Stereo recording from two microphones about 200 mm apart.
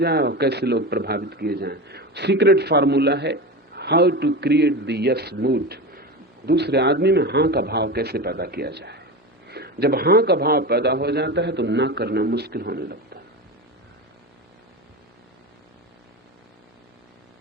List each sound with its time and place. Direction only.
0.0 s a man's voice: 55° right (ahead or behind)